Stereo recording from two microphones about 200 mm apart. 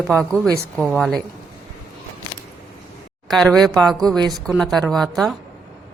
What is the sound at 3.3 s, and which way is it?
Speech, centre (ahead or behind).